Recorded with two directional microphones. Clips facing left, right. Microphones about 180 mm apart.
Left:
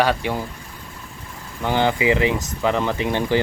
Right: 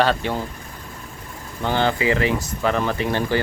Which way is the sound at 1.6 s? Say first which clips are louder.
Left 1 dB; 15° left (ahead or behind).